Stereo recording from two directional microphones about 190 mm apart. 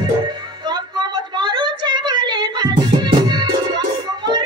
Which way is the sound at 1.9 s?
25° right (ahead or behind).